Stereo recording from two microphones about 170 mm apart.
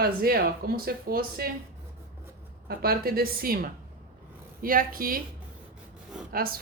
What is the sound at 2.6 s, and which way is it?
A woman's voice, 65° right (ahead or behind).